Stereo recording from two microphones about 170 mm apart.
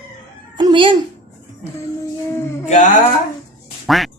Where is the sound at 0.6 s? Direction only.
30° right (ahead or behind).